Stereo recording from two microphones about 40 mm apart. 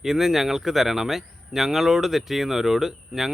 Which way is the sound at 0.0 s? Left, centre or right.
Centre.